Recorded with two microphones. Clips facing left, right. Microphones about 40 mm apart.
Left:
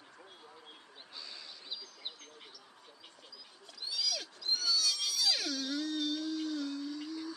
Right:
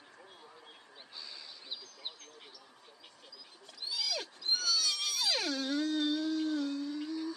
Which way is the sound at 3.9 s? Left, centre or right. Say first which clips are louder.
Even; right.